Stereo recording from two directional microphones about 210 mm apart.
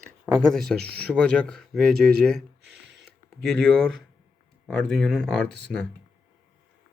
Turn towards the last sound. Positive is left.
turn(degrees=5)  # may be behind; listen again after turning